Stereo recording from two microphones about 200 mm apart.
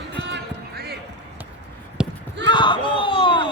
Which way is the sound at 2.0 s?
5° right (ahead or behind).